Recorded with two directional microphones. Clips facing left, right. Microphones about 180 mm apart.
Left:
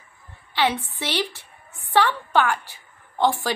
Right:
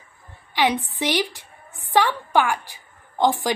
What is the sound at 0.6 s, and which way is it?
A woman's voice, 15° right (ahead or behind).